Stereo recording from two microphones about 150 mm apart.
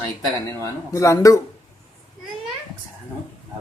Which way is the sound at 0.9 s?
20° left (ahead or behind).